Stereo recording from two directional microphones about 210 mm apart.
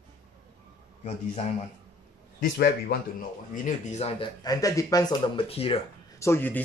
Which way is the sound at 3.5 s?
35° left (ahead or behind).